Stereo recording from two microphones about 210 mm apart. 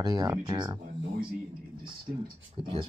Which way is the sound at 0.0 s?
20° right (ahead or behind).